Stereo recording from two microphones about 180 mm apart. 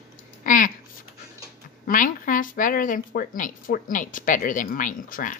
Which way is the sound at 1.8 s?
50° left (ahead or behind).